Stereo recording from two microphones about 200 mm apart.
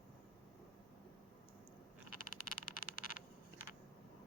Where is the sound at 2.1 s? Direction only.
45° left (ahead or behind).